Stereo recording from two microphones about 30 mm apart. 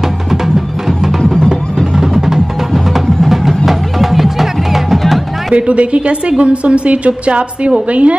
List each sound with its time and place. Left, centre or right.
0.3 s music: centre
2.0 s music: centre
2.7 s music: centre
5.5 s a woman's voice: right